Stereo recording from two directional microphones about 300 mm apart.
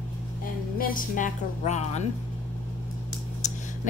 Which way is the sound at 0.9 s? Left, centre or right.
Left.